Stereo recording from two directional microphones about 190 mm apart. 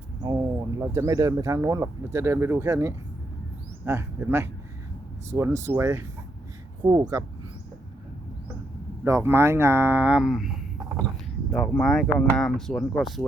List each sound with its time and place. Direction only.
0.2 s speech: 20° right (ahead or behind)
9.0 s speech: 15° right (ahead or behind)